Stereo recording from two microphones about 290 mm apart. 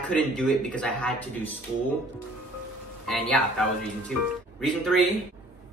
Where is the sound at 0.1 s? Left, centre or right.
Centre.